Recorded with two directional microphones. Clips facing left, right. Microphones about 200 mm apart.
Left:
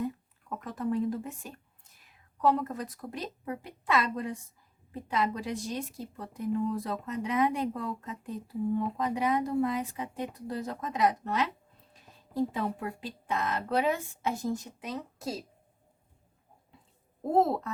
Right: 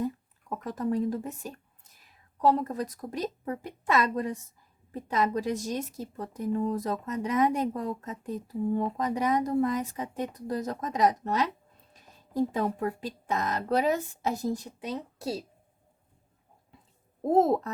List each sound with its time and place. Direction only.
0.6 s a woman's voice: 40° right (ahead or behind)
17.3 s a woman's voice: 40° right (ahead or behind)